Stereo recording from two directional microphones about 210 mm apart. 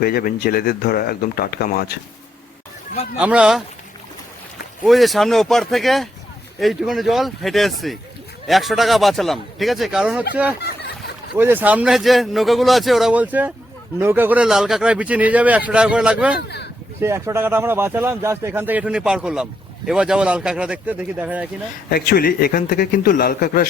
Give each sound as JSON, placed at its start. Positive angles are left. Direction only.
{"t": 0.0, "sound": "speech", "side_deg": 45}
{"t": 3.2, "sound": "speech", "side_deg": -5}
{"t": 4.9, "sound": "speech", "side_deg": 0}
{"t": 11.3, "sound": "speech", "side_deg": -10}
{"t": 21.8, "sound": "speech", "side_deg": 45}